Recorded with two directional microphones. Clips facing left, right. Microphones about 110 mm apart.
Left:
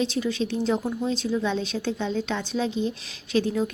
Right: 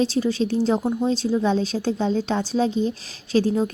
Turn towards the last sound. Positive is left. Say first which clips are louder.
# right 4 dB
turn(degrees=-35)  # may be behind; listen again after turning